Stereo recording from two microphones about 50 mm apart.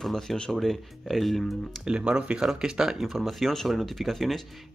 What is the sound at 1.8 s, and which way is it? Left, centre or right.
Speech, centre.